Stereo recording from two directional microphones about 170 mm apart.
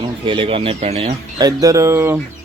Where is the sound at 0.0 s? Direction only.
30° right (ahead or behind).